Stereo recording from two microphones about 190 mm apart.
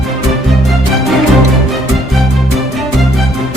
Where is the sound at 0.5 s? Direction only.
Centre (ahead or behind).